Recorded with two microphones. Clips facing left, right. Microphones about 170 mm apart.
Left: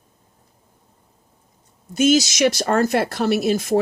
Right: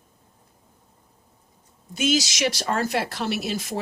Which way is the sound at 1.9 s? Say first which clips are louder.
Left 7 dB; 45° left (ahead or behind).